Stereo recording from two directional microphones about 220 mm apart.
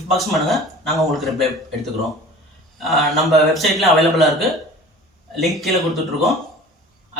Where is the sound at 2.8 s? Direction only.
Centre (ahead or behind).